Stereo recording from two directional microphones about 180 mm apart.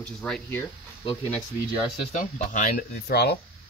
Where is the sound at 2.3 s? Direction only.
50° left (ahead or behind).